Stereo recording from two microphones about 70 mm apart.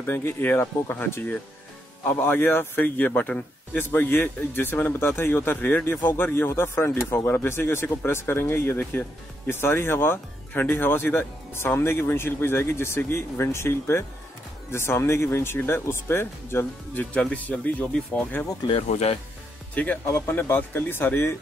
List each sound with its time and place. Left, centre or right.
0.0 s speech: left
17.1 s speech: centre
19.7 s speech: left